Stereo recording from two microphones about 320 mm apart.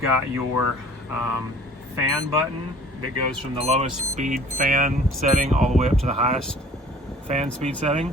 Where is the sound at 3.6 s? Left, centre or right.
Centre.